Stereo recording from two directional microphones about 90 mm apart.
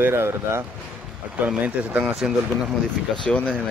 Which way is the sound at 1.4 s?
15° right (ahead or behind).